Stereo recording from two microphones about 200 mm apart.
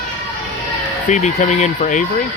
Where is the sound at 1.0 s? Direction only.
35° left (ahead or behind).